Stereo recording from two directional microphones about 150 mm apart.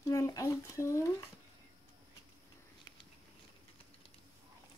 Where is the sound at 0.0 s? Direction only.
25° left (ahead or behind).